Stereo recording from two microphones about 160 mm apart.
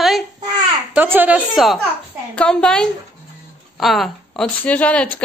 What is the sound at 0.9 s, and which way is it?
A woman's voice, 10° right (ahead or behind).